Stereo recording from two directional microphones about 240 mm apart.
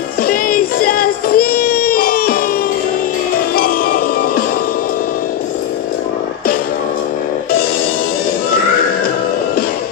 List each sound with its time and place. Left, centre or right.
0.3 s child singing: left
3.5 s music: left